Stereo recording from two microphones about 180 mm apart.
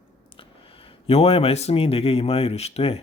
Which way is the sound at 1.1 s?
35° left (ahead or behind).